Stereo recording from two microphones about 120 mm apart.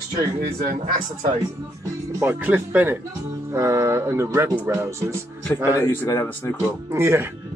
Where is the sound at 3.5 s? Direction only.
25° right (ahead or behind).